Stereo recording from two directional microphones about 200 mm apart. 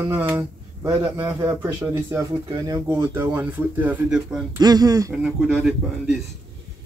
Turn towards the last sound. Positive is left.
turn(degrees=-5)  # may be behind; listen again after turning